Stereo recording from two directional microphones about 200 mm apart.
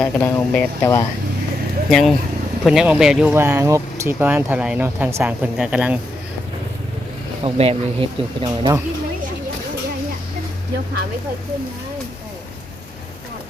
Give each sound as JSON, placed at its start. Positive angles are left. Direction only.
{"t": 0.0, "sound": "speech", "side_deg": 10}
{"t": 1.9, "sound": "speech", "side_deg": 0}
{"t": 7.4, "sound": "speech", "side_deg": -30}